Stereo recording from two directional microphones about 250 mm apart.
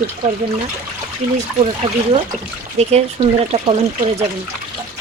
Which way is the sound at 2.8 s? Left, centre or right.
Right.